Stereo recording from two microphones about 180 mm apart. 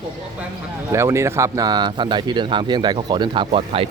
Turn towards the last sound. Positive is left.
turn(degrees=-30)  # may be behind; listen again after turning